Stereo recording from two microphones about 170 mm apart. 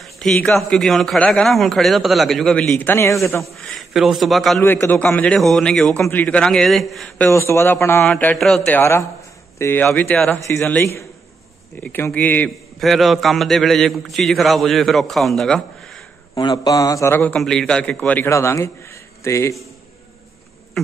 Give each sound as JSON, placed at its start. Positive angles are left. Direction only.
{"t": 0.0, "sound": "a sound", "side_deg": 5}
{"t": 0.6, "sound": "a man's voice", "side_deg": 0}
{"t": 3.5, "sound": "a man's voice", "side_deg": 0}
{"t": 4.6, "sound": "a man's voice", "side_deg": 10}
{"t": 7.2, "sound": "a man's voice", "side_deg": 15}
{"t": 16.3, "sound": "a man's voice", "side_deg": 25}